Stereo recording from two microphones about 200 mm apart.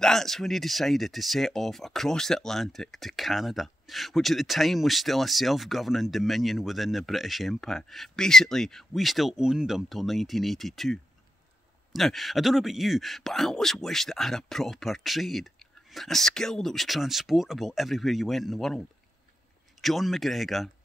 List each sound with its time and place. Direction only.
0.0 s speech: centre (ahead or behind)